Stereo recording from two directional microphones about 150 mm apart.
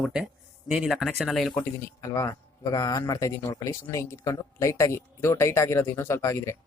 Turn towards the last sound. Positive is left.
turn(degrees=20)  # may be behind; listen again after turning